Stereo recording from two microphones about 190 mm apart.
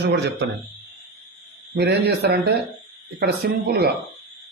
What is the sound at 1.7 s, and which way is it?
Speech, 60° right (ahead or behind).